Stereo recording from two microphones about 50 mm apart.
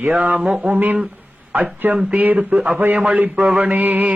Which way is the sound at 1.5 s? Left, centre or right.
Right.